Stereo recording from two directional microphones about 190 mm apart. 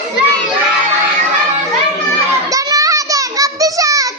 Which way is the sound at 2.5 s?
15° right (ahead or behind).